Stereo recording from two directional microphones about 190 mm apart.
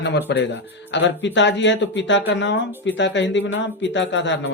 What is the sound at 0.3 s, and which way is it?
Speech, 65° left (ahead or behind).